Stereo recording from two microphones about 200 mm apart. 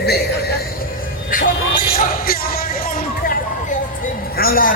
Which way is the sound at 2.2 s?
50° left (ahead or behind).